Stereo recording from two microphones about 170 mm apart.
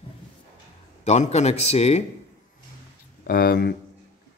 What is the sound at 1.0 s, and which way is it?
A man's voice, 40° left (ahead or behind).